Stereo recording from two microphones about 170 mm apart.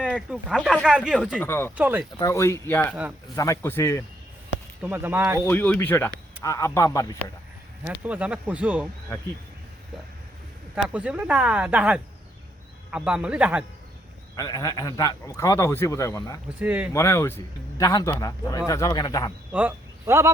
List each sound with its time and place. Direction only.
0.0 s speech: 5° right (ahead or behind)
1.4 s a man's voice: 15° left (ahead or behind)
1.7 s speech: 10° right (ahead or behind)
2.1 s a man's voice: 20° left (ahead or behind)
2.9 s speech: 5° right (ahead or behind)
3.3 s a man's voice: 20° left (ahead or behind)
4.8 s speech: 10° right (ahead or behind)
5.5 s a man's voice: 10° left (ahead or behind)
7.9 s speech: 10° right (ahead or behind)
10.8 s speech: 5° right (ahead or behind)
14.3 s a man's voice: 20° left (ahead or behind)
16.6 s speech: 10° right (ahead or behind)
16.9 s a man's voice: 15° left (ahead or behind)
19.5 s speech: 10° right (ahead or behind)